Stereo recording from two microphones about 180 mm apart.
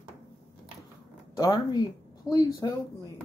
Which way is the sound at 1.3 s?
20° left (ahead or behind).